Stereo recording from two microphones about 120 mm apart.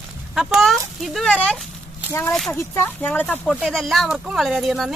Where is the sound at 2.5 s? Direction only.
20° left (ahead or behind).